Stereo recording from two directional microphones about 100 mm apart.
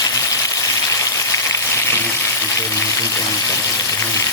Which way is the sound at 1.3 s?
30° left (ahead or behind).